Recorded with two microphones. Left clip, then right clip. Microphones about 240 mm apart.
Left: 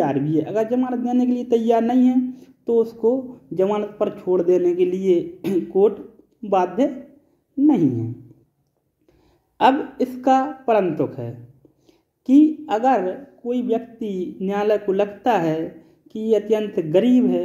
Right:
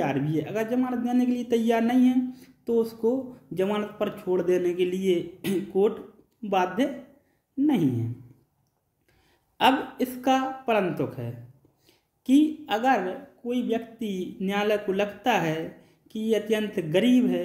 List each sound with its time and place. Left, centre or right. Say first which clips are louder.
0.0 s speech: left 7 dB; centre
9.6 s speech: left 5 dB; centre